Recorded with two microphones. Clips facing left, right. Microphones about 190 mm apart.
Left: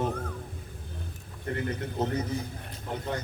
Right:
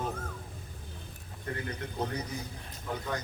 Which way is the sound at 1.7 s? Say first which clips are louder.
Left 4 dB; 25° left (ahead or behind).